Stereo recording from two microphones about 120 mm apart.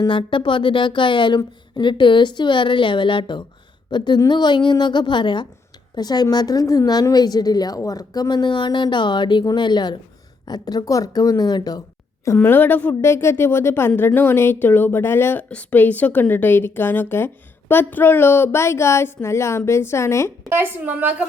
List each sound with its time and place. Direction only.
0.1 s speech: 45° left (ahead or behind)
12.4 s a woman's voice: 15° left (ahead or behind)
20.5 s a woman's voice: 15° right (ahead or behind)